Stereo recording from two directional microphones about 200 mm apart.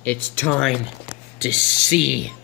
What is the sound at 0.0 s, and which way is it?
Speech, 10° left (ahead or behind).